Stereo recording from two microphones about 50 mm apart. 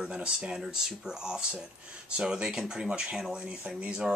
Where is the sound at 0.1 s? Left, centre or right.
Centre.